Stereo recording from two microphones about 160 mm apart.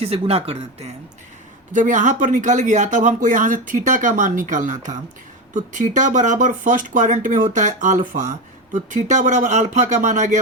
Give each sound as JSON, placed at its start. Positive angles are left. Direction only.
{"t": 0.0, "sound": "speech", "side_deg": -40}
{"t": 1.7, "sound": "speech", "side_deg": -50}